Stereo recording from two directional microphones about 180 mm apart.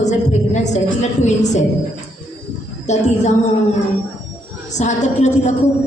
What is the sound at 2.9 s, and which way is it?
Speech, 40° left (ahead or behind).